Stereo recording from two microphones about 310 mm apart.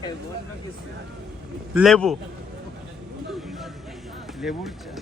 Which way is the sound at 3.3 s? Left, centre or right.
Centre.